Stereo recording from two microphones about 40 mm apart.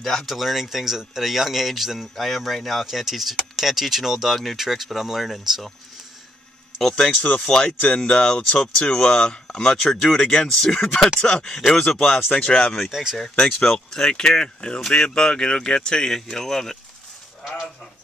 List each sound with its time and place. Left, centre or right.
0.0 s speech: centre
0.3 s speech: centre
6.8 s speech: centre
11.1 s speech: left
12.9 s speech: centre
14.0 s speech: centre